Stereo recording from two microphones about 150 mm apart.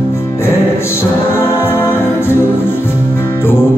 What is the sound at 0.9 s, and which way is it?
Music, 15° left (ahead or behind).